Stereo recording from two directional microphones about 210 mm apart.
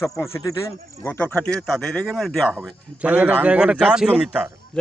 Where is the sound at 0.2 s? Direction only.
15° left (ahead or behind); by 4.5 s 10° right (ahead or behind).